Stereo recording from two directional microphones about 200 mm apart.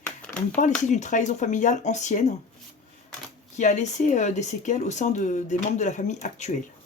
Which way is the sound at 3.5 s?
35° left (ahead or behind).